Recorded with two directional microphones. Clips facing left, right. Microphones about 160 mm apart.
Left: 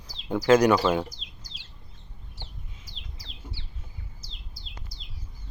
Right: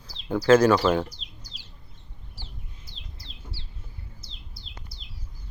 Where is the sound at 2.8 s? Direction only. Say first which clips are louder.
Even; 90° left.